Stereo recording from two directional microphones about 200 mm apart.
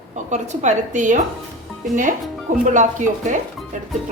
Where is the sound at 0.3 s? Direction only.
35° right (ahead or behind).